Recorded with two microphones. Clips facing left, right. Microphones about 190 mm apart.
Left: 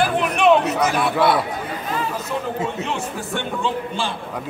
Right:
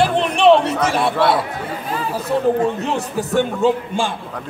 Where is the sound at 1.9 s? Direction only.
35° right (ahead or behind).